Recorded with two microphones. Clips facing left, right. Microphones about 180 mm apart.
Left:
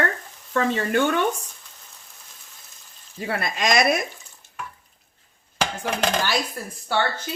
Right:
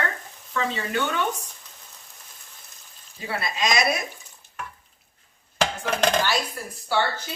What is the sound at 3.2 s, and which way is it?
Speech, 50° left (ahead or behind).